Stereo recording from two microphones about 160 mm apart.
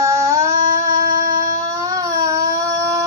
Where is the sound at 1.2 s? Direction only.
20° right (ahead or behind).